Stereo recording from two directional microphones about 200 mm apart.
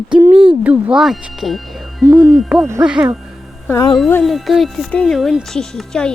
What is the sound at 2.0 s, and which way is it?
Hoot, 15° right (ahead or behind).